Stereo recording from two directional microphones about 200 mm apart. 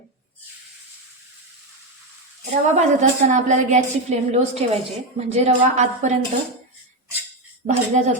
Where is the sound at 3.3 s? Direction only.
35° right (ahead or behind).